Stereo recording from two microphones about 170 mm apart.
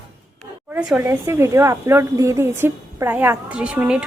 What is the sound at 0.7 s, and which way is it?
Speech, 5° right (ahead or behind).